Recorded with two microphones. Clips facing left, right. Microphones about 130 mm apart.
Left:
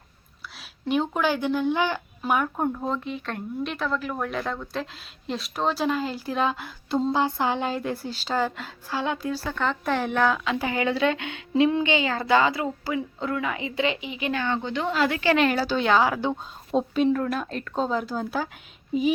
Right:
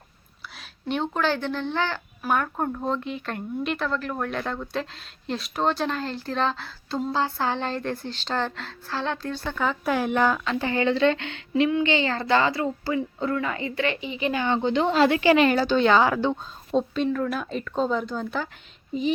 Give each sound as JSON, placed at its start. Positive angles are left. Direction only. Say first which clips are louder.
{"t": 0.4, "sound": "speech", "louder": "left 1 dB", "side_deg": 0}
{"t": 10.3, "sound": "speech", "louder": "right 1 dB", "side_deg": 5}
{"t": 14.0, "sound": "speech", "louder": "right 2 dB", "side_deg": 5}
{"t": 14.3, "sound": "a woman's voice", "louder": "right 5 dB", "side_deg": -20}
{"t": 15.4, "sound": "speech", "louder": "right 3 dB", "side_deg": 0}